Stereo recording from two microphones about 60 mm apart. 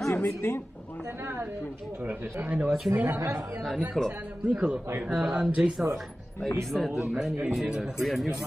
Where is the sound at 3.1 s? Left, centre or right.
Right.